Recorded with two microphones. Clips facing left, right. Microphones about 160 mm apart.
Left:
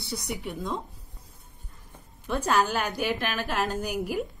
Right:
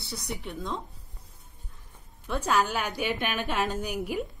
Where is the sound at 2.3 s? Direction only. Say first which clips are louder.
Left 2 dB; centre (ahead or behind).